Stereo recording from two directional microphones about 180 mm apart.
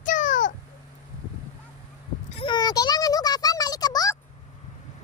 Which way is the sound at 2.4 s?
25° left (ahead or behind).